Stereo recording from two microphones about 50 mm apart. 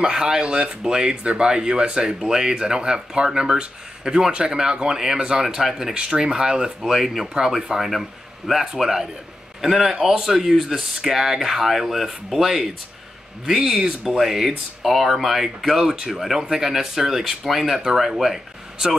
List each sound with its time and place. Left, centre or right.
0.0 s speech: centre